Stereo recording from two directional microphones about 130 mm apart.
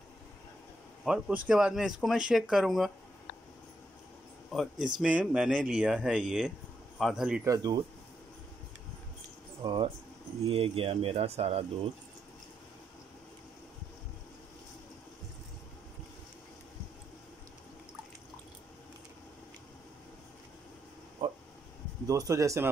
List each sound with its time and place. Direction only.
1.0 s a man's voice: 5° right (ahead or behind)
4.5 s speech: 5° right (ahead or behind)
7.4 s speech: 30° right (ahead or behind)
10.5 s speech: 45° right (ahead or behind)
21.2 s a sound: 40° right (ahead or behind)
22.0 s speech: 25° right (ahead or behind)